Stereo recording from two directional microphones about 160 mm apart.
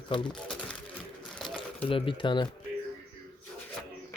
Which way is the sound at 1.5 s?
35° left (ahead or behind).